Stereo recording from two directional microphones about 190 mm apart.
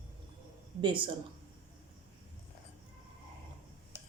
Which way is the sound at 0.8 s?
25° right (ahead or behind).